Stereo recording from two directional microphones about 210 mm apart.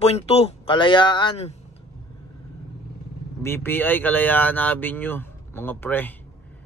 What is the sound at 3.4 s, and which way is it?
Speech, 10° left (ahead or behind).